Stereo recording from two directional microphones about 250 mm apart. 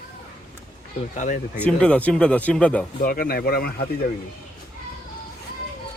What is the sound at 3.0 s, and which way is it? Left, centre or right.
Speech, left.